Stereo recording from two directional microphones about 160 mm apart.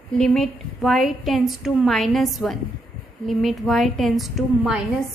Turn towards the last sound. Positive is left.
turn(degrees=0)  # may be behind; listen again after turning